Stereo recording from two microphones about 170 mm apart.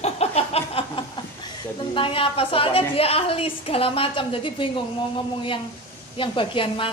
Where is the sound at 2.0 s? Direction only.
35° left (ahead or behind).